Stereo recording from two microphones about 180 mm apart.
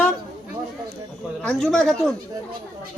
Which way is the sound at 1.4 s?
5° left (ahead or behind).